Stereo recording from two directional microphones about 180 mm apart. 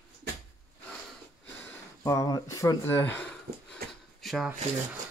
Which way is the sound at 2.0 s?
20° left (ahead or behind).